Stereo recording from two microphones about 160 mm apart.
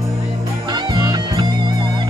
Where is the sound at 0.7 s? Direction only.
30° right (ahead or behind).